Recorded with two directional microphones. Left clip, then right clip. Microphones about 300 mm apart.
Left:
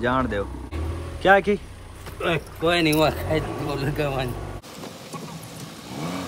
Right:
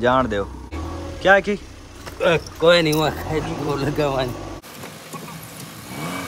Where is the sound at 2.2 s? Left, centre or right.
Centre.